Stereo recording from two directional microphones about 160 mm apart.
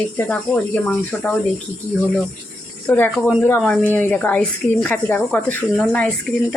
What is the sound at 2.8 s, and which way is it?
Speech, 10° left (ahead or behind).